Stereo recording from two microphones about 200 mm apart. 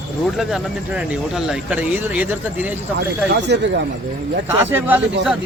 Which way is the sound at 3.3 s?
55° right (ahead or behind).